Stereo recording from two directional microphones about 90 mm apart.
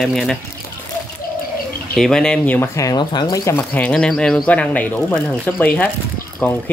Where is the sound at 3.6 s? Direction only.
15° left (ahead or behind).